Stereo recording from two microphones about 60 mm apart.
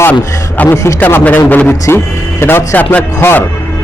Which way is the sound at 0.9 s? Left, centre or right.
Left.